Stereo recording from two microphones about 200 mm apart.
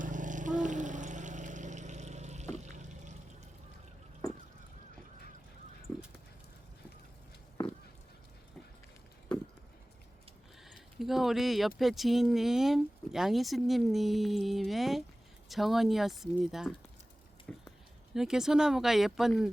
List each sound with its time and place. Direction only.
0.0 s vehicle: 40° right (ahead or behind)
10.6 s a sound: centre (ahead or behind)
11.8 s speech: centre (ahead or behind)